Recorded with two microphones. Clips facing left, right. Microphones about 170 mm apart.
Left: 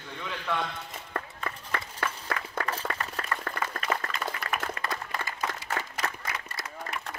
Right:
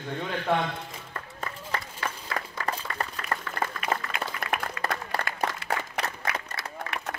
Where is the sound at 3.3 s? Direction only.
35° right (ahead or behind).